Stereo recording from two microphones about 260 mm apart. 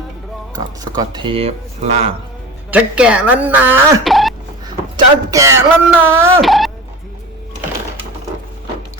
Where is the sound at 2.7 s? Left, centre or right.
Centre.